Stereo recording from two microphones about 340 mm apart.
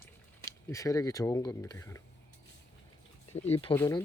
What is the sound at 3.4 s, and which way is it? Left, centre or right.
Speech, centre.